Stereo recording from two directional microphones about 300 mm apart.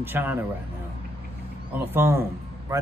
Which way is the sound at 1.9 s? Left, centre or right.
Centre.